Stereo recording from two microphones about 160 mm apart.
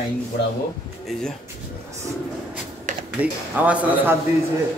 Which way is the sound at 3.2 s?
10° right (ahead or behind).